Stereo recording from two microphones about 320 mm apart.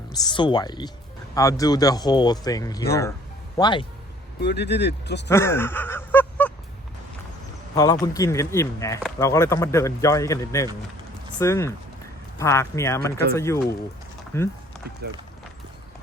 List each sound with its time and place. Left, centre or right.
0.2 s speech: centre
4.4 s speech: left
5.3 s a sound: centre
7.8 s speech: centre